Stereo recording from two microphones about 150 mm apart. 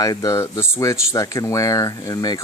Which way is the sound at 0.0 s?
25° left (ahead or behind).